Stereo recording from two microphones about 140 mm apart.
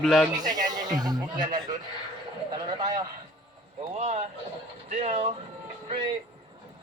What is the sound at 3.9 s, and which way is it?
Speech, 50° right (ahead or behind).